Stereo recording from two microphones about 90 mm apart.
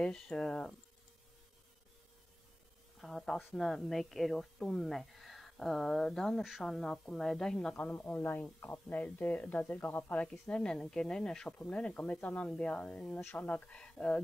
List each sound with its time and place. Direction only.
0.0 s speech: 10° left (ahead or behind)
3.0 s a woman's voice: centre (ahead or behind)
7.8 s speech: 20° left (ahead or behind)
10.5 s speech: 10° left (ahead or behind)